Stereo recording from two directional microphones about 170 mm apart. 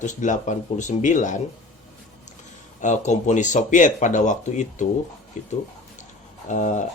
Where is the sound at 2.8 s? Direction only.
45° left (ahead or behind).